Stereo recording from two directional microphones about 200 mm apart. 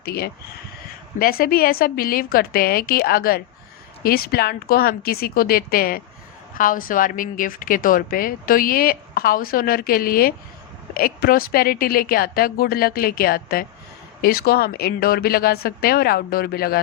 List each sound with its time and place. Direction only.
0.0 s a woman's voice: 50° left (ahead or behind)